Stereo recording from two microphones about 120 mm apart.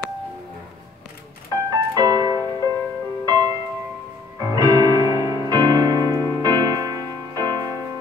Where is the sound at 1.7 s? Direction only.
30° right (ahead or behind).